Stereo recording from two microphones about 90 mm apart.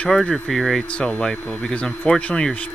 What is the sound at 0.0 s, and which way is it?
Speech, 5° left (ahead or behind).